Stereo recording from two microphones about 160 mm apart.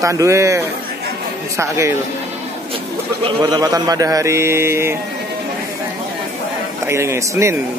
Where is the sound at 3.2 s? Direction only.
30° right (ahead or behind).